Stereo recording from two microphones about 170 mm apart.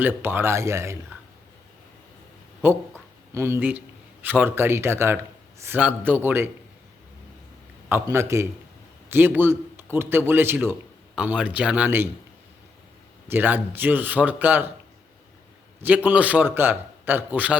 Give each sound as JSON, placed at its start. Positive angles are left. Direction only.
{"t": 0.0, "sound": "a man's voice", "side_deg": -10}
{"t": 2.6, "sound": "a man's voice", "side_deg": -15}
{"t": 7.9, "sound": "a man's voice", "side_deg": -15}
{"t": 13.2, "sound": "a man's voice", "side_deg": -10}
{"t": 16.0, "sound": "a man's voice", "side_deg": -10}